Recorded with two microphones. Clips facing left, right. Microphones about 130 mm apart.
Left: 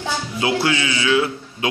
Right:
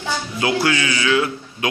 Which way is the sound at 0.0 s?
25° left (ahead or behind).